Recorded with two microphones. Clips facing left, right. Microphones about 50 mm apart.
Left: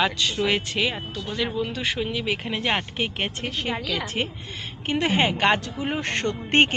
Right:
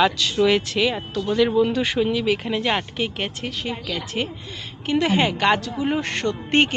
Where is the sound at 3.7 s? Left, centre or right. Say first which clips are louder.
Left 3 dB; left.